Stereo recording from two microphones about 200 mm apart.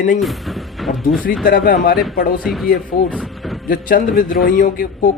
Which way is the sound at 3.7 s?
45° left (ahead or behind).